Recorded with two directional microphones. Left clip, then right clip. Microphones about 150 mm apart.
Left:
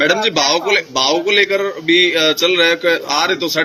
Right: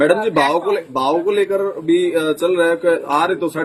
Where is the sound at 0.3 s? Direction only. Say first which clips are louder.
Left 1 dB; 50° right (ahead or behind).